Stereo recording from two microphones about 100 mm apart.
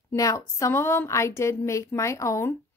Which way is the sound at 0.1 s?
35° left (ahead or behind).